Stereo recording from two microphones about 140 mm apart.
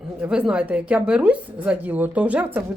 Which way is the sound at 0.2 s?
5° right (ahead or behind).